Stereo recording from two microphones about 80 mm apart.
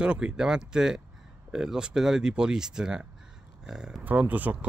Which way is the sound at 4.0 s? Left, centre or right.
Right.